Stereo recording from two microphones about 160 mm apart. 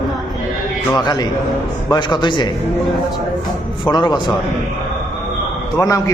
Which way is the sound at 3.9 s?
30° left (ahead or behind).